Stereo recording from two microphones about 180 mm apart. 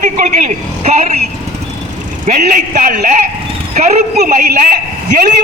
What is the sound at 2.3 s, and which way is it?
A man's voice, 45° right (ahead or behind).